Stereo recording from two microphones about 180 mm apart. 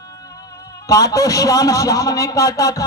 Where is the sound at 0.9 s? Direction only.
20° left (ahead or behind).